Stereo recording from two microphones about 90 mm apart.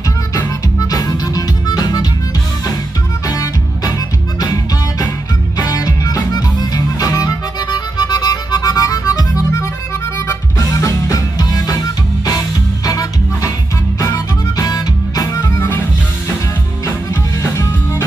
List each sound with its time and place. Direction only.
0.7 s music: 45° left (ahead or behind)
5.6 s music: 40° left (ahead or behind)
10.7 s music: 40° left (ahead or behind)
12.8 s music: 40° left (ahead or behind)
14.7 s music: 45° left (ahead or behind)
16.8 s music: 30° left (ahead or behind)